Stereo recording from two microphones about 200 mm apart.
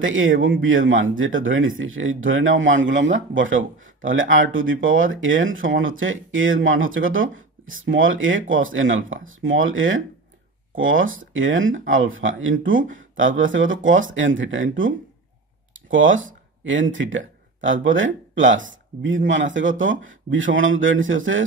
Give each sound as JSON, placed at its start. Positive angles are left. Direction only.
{"t": 0.0, "sound": "speech", "side_deg": -75}